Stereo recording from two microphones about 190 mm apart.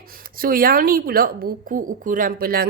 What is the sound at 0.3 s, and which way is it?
Speech, 50° right (ahead or behind).